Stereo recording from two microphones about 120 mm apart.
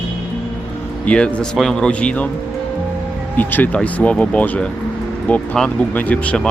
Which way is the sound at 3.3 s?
15° left (ahead or behind).